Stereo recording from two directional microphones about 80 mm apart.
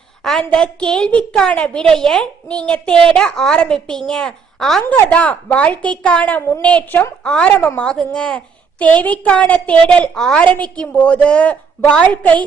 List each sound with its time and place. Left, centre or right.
0.2 s a woman's voice: centre